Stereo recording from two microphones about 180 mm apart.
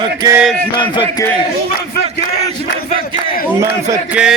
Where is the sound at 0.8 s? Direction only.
25° left (ahead or behind).